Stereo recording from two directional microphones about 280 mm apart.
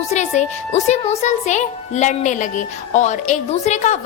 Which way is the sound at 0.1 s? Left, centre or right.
Left.